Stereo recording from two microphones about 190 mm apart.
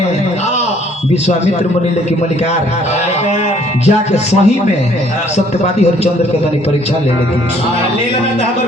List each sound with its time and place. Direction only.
3.8 s speech: 35° left (ahead or behind)